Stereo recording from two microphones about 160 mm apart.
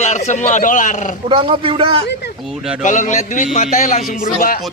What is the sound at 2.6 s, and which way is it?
Speech, centre (ahead or behind).